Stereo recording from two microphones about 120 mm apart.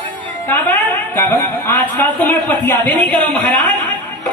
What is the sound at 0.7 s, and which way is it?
Speech, 15° left (ahead or behind).